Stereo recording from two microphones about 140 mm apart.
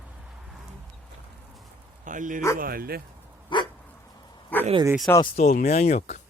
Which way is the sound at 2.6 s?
90° right.